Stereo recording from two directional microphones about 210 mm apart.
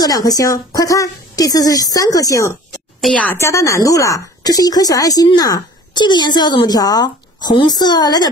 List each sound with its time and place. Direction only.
0.0 s a woman's voice: 15° left (ahead or behind)
3.0 s a woman's voice: 5° left (ahead or behind)